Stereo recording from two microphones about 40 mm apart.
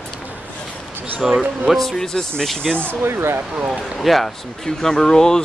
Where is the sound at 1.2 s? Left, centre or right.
Centre.